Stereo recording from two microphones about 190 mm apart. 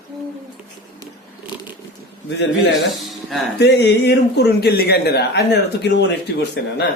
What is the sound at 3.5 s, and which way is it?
A man's voice, 60° left (ahead or behind).